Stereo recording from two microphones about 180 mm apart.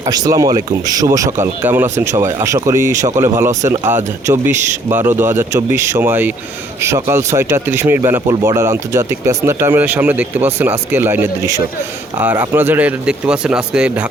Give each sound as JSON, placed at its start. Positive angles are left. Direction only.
{"t": 0.0, "sound": "speech", "side_deg": -20}